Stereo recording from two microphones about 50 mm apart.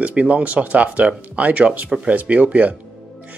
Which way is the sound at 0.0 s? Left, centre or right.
Right.